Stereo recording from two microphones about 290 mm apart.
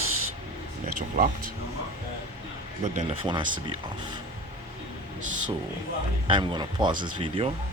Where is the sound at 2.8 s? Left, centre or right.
Right.